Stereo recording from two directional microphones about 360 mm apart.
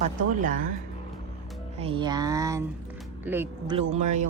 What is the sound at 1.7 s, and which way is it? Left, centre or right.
Speech, centre.